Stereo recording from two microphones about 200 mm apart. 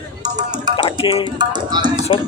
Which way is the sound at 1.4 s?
20° right (ahead or behind).